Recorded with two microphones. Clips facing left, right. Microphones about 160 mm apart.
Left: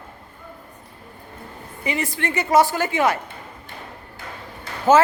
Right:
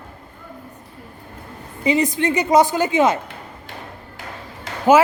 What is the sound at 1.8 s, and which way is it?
A woman's voice, 20° right (ahead or behind).